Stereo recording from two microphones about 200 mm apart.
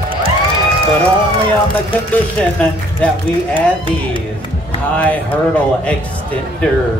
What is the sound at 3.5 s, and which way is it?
Speech, 25° left (ahead or behind).